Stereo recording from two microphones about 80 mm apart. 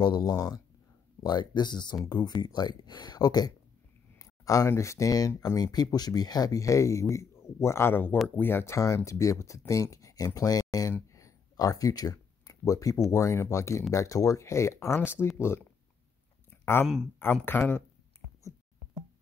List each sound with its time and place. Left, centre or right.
0.2 s speech: left
1.2 s speech: left
4.2 s speech: left
5.6 s speech: left
8.7 s speech: left
10.9 s a sound: left
13.1 s speech: left
16.4 s a sound: left
16.8 s speech: centre
17.2 s speech: left